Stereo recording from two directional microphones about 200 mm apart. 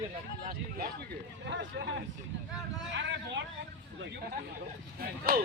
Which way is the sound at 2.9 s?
60° right (ahead or behind).